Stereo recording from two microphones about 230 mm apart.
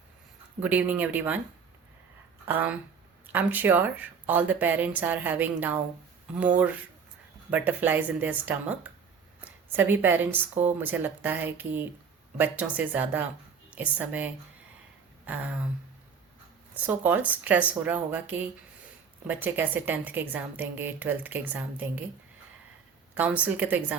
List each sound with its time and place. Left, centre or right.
0.6 s a woman's voice: centre
2.5 s a woman's voice: centre
7.5 s a woman's voice: centre
15.3 s a woman's voice: centre
16.8 s a woman's voice: centre
23.1 s a woman's voice: centre